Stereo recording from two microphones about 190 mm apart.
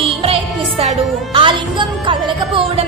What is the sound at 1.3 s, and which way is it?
Music, 25° right (ahead or behind).